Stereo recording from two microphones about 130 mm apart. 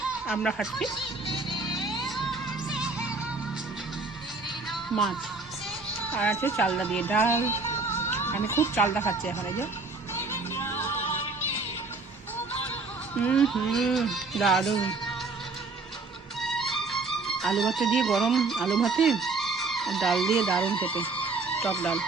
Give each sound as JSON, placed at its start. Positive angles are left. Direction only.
{"t": 0.4, "sound": "speech", "side_deg": 0}
{"t": 0.9, "sound": "music", "side_deg": 40}
{"t": 1.7, "sound": "music", "side_deg": 0}
{"t": 4.7, "sound": "music", "side_deg": 0}
{"t": 6.1, "sound": "speech", "side_deg": 10}
{"t": 6.7, "sound": "music", "side_deg": 10}
{"t": 13.2, "sound": "speech", "side_deg": 5}
{"t": 16.4, "sound": "speech", "side_deg": 0}